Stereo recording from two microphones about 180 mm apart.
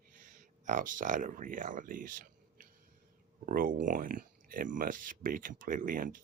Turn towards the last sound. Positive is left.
turn(degrees=-50)  # may be behind; listen again after turning